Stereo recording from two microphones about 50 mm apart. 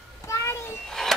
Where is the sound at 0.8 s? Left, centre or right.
Centre.